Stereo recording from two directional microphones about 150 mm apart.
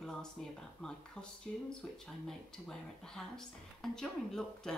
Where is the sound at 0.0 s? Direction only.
5° left (ahead or behind).